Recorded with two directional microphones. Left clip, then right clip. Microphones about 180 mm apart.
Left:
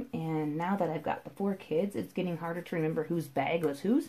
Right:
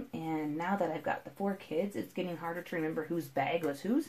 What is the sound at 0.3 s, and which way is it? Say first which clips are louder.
Speech: left 1 dB; 35° left (ahead or behind).